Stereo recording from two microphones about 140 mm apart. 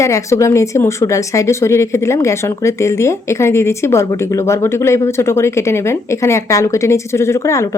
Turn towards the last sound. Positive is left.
turn(degrees=20)  # may be behind; listen again after turning